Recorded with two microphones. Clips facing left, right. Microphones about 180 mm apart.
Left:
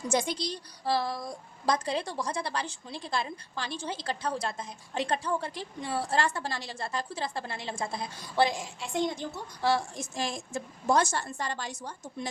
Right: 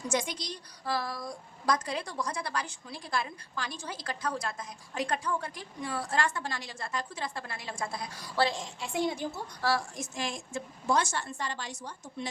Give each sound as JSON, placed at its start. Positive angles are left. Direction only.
{"t": 0.1, "sound": "a woman's voice", "side_deg": 30}
{"t": 8.5, "sound": "a woman's voice", "side_deg": 0}
{"t": 9.6, "sound": "a woman's voice", "side_deg": 25}